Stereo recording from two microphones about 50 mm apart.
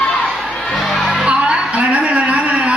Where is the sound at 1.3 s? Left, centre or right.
Centre.